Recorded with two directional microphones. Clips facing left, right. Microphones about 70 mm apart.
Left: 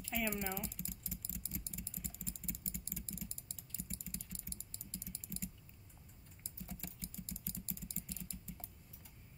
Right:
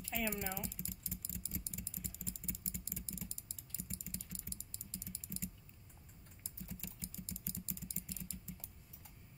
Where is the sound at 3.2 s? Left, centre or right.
Left.